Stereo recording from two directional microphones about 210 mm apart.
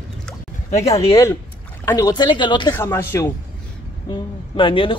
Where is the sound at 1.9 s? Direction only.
15° left (ahead or behind).